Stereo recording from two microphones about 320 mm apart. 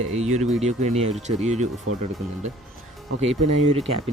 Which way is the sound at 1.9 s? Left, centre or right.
Right.